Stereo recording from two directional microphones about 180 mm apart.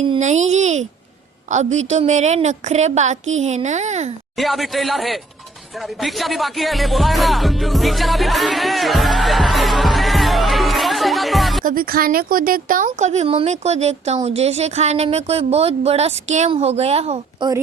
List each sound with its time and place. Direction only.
0.2 s speech: 40° right (ahead or behind)
4.4 s speech: centre (ahead or behind)
6.0 s music: centre (ahead or behind)
11.6 s a woman's voice: 55° right (ahead or behind); by 17.5 s 35° right (ahead or behind)